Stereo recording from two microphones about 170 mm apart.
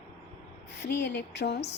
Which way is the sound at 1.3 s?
85° left.